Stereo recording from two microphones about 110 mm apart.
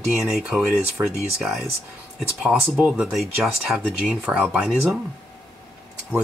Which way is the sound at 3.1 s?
Centre (ahead or behind).